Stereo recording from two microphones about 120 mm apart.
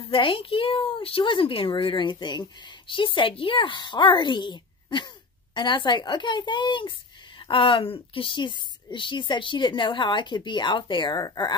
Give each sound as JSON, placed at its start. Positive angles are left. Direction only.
{"t": 0.1, "sound": "a woman's voice", "side_deg": 45}